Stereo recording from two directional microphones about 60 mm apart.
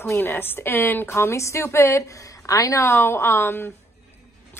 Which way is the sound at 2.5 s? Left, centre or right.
Left.